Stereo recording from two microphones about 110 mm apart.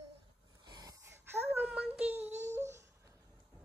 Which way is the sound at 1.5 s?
15° right (ahead or behind).